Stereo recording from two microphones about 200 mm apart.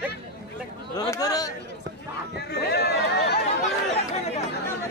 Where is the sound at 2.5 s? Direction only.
55° left (ahead or behind).